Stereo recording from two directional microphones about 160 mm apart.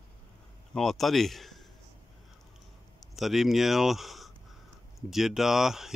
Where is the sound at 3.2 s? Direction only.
Centre (ahead or behind).